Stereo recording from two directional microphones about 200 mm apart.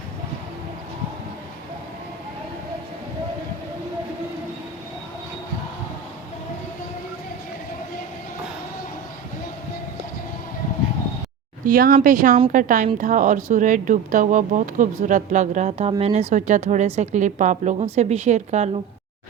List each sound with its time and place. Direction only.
11.6 s a woman's voice: 45° right (ahead or behind)